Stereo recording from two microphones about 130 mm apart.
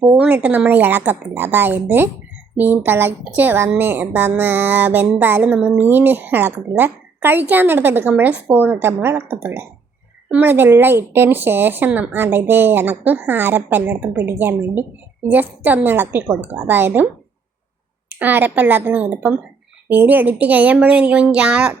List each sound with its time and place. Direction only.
0.0 s speech: 10° right (ahead or behind)
18.2 s speech: 15° right (ahead or behind)